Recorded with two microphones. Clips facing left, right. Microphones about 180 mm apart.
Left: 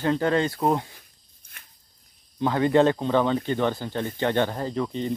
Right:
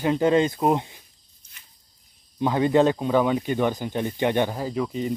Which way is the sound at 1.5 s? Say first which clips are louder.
Left 4 dB; 55° left (ahead or behind).